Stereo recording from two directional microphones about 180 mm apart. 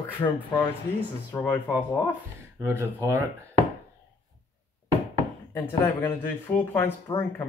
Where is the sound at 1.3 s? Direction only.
15° left (ahead or behind).